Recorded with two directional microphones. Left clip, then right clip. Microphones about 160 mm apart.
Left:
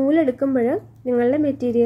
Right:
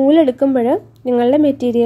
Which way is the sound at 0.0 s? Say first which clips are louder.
Right 7 dB; 35° right (ahead or behind).